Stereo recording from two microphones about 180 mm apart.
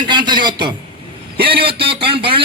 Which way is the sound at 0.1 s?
25° right (ahead or behind).